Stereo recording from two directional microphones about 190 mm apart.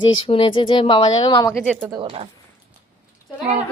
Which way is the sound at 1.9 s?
30° right (ahead or behind).